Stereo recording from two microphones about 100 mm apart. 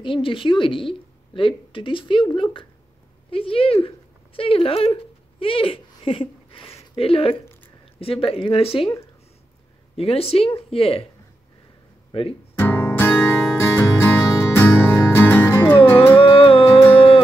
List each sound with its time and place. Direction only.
0.0 s a woman's voice: 60° left (ahead or behind)
9.9 s speech: 80° left
12.1 s speech: 65° left (ahead or behind)
12.5 s music: 25° left (ahead or behind)
16.3 s music: 65° left (ahead or behind)